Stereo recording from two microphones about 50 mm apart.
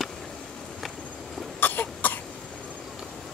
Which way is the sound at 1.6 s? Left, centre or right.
Left.